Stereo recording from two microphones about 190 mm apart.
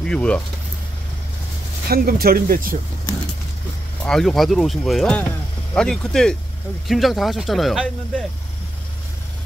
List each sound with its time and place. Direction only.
0.0 s speech: 5° left (ahead or behind)
1.9 s speech: 50° right (ahead or behind)
4.0 s speech: centre (ahead or behind)